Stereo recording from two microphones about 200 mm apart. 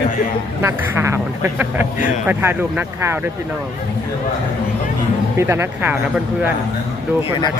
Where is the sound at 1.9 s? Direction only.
40° left (ahead or behind).